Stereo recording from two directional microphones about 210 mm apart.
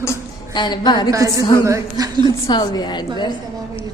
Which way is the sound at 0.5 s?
20° left (ahead or behind).